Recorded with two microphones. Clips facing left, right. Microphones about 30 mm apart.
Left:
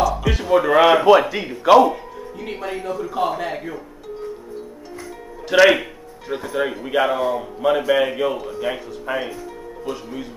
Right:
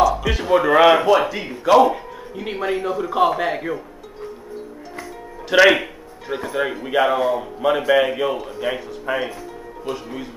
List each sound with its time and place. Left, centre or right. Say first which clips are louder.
0.0 s a sound: right 2 dB; centre
1.3 s speech: left 2 dB; centre
1.8 s speech: even; centre
5.5 s speech: even; centre